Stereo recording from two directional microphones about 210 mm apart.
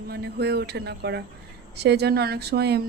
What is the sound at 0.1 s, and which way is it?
Speech, 50° right (ahead or behind).